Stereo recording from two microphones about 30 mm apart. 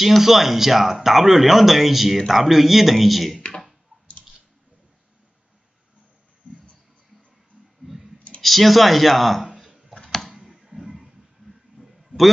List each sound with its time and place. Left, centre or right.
0.2 s speech: centre
3.3 s clicking: left
6.4 s a sound: right
7.8 s clicking: centre
8.4 s speech: centre
9.9 s tick-tock: left
11.0 s a sound: centre